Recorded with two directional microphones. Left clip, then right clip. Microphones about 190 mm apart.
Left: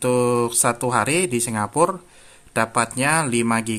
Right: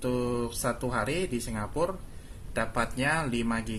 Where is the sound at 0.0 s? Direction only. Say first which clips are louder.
Left 11 dB; 40° left (ahead or behind).